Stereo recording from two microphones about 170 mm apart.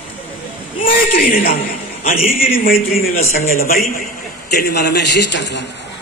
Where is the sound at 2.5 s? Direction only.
60° left (ahead or behind).